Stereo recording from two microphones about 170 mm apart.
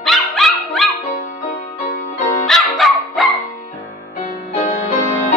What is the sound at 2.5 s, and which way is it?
Music, centre (ahead or behind).